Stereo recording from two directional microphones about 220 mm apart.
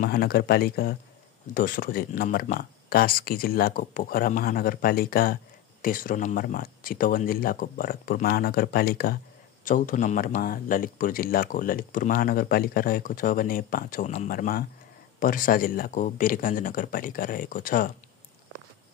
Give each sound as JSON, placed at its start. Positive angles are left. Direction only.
{"t": 0.0, "sound": "speech", "side_deg": 45}